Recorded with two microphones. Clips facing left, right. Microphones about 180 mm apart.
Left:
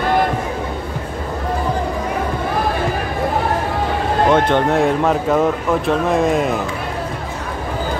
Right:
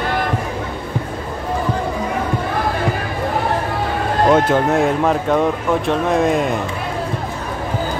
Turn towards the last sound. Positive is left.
turn(degrees=0)  # may be behind; listen again after turning